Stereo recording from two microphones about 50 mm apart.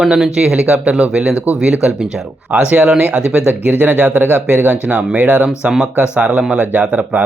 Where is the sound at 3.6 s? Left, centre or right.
Right.